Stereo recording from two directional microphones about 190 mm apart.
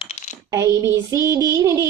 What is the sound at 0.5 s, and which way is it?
Child singing, 15° right (ahead or behind).